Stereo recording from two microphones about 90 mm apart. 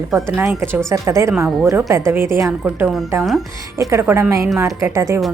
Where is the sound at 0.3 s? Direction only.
25° right (ahead or behind).